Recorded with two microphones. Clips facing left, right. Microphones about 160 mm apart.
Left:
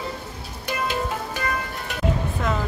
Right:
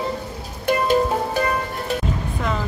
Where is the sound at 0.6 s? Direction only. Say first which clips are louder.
Right 8 dB; 40° right (ahead or behind).